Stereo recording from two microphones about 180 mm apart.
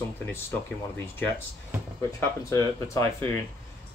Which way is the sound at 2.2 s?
15° left (ahead or behind).